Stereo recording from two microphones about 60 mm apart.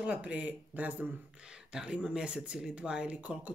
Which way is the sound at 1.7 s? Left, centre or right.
Centre.